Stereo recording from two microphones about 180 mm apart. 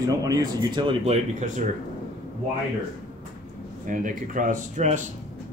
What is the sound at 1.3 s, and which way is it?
Speech, 45° right (ahead or behind).